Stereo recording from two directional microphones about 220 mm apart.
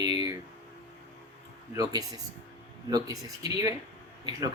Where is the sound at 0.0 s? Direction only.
20° right (ahead or behind).